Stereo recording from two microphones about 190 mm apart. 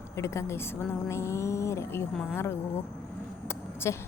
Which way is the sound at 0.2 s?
15° left (ahead or behind).